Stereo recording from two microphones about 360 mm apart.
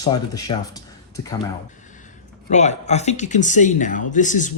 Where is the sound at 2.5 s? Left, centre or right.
Centre.